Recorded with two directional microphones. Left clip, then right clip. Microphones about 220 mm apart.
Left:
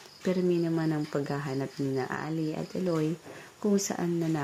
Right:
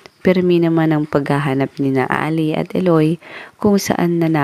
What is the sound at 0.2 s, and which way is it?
Speech, 35° right (ahead or behind).